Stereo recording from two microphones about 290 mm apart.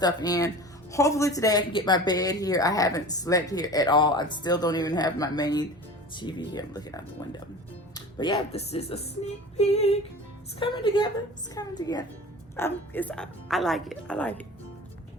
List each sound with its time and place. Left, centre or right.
0.0 s speech: centre